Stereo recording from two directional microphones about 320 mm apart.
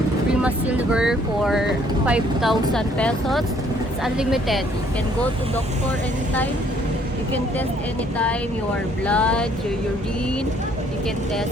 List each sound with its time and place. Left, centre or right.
0.4 s speech: centre
9.0 s speech: centre